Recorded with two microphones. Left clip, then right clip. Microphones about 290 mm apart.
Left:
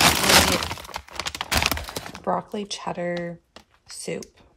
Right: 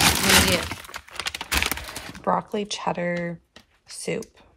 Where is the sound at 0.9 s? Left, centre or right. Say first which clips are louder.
Even; left.